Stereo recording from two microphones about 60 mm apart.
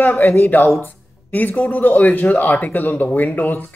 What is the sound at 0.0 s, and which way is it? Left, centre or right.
Speech, left.